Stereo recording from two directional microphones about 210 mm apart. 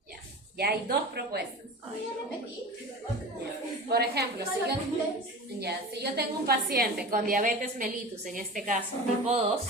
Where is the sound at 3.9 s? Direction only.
50° right (ahead or behind).